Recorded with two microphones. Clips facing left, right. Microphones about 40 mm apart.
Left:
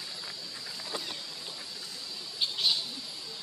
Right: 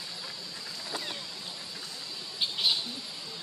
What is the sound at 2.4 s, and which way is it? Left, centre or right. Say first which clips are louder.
Bird: right 1 dB; centre.